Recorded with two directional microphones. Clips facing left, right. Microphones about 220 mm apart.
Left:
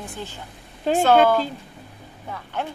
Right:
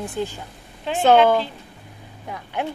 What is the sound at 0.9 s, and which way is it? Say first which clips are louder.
Speech: left 5 dB; 40° left (ahead or behind).